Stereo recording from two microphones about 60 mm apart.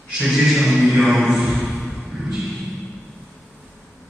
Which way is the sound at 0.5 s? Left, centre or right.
Centre.